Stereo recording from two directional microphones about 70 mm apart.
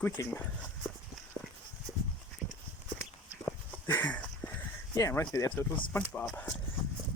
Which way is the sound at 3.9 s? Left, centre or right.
Left.